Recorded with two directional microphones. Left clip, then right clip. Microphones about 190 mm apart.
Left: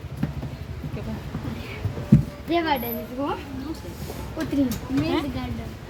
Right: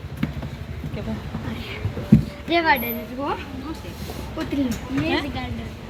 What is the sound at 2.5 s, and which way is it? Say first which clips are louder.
Speech: right 5 dB; 20° left (ahead or behind).